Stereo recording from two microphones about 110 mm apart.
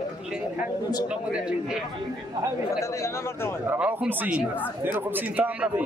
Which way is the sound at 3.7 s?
15° right (ahead or behind).